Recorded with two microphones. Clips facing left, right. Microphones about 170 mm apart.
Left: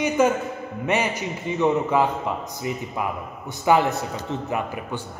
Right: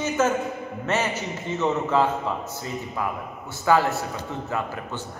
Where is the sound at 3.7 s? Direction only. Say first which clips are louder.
Left 1 dB; 20° left (ahead or behind).